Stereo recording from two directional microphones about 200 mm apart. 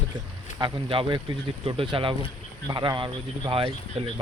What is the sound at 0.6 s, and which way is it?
Speech, 25° right (ahead or behind).